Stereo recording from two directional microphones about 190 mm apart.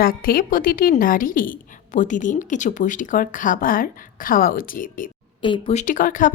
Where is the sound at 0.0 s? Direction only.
50° left (ahead or behind).